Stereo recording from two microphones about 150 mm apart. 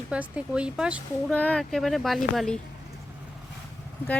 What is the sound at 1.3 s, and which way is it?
Speech, 10° left (ahead or behind).